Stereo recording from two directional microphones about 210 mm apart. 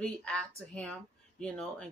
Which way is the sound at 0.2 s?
5° left (ahead or behind).